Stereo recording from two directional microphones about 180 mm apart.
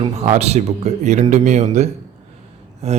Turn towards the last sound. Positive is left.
turn(degrees=-35)  # may be behind; listen again after turning